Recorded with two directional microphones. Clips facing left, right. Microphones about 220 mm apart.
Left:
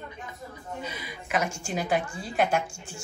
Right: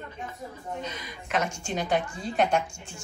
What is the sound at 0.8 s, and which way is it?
A woman's voice, 5° left (ahead or behind).